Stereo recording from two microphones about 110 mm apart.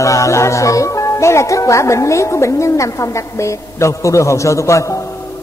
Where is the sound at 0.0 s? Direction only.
30° left (ahead or behind).